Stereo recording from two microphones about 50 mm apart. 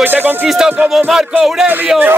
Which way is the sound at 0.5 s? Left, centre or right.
Centre.